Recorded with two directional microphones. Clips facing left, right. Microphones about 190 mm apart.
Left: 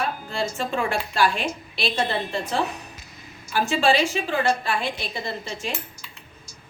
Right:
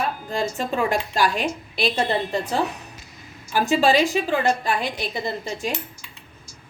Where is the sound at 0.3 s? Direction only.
40° right (ahead or behind).